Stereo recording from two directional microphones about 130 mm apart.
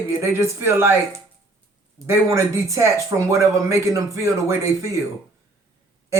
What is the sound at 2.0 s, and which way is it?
Speech, 20° right (ahead or behind).